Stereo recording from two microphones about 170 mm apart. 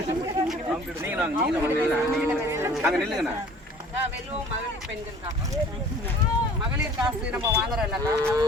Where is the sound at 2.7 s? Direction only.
Centre (ahead or behind).